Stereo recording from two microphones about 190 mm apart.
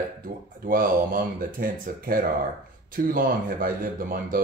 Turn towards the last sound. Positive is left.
turn(degrees=-45)  # may be behind; listen again after turning